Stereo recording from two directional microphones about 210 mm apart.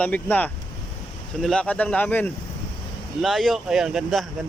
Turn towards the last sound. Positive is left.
turn(degrees=0)  # may be behind; listen again after turning